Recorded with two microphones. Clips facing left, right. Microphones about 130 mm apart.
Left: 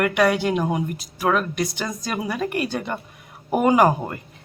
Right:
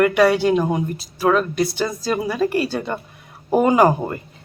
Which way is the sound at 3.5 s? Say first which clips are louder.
Right 2 dB; 5° left (ahead or behind).